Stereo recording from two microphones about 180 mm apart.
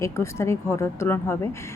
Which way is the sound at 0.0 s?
15° left (ahead or behind).